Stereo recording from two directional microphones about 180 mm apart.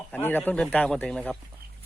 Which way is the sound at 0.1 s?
10° left (ahead or behind).